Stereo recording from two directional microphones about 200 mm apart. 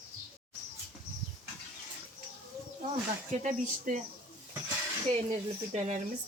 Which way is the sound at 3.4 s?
40° right (ahead or behind).